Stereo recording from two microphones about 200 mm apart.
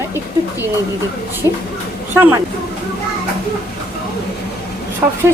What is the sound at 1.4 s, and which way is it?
Speech, 15° right (ahead or behind).